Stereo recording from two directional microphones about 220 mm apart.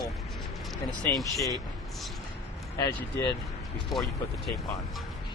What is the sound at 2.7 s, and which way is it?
Speech, 15° left (ahead or behind).